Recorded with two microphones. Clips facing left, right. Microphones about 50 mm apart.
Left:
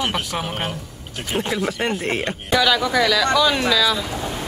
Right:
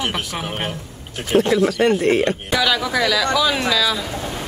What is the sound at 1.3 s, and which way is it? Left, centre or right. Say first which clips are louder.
Speech: right 7 dB; centre.